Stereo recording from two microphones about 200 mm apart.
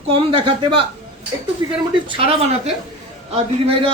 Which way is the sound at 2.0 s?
30° right (ahead or behind).